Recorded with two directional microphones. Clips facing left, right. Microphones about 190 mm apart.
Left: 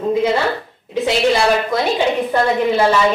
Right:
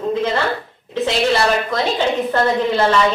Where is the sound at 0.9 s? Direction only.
10° left (ahead or behind).